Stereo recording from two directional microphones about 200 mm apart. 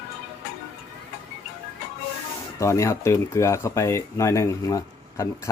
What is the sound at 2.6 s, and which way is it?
Speech, 15° left (ahead or behind).